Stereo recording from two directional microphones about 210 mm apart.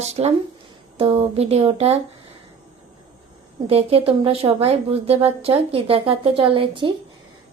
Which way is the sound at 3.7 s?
30° right (ahead or behind).